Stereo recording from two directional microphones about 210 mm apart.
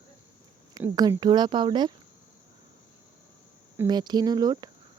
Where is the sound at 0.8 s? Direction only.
15° right (ahead or behind).